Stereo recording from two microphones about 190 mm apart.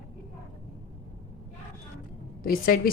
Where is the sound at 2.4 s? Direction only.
50° left (ahead or behind).